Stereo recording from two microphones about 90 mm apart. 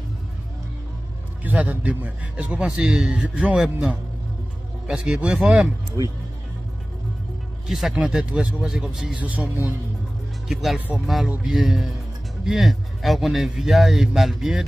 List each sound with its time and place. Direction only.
1.4 s a man's voice: 15° right (ahead or behind)
6.0 s speech: 45° right (ahead or behind)
7.6 s a man's voice: 5° right (ahead or behind)
9.2 s a man's voice: 15° right (ahead or behind)
10.5 s speech: centre (ahead or behind)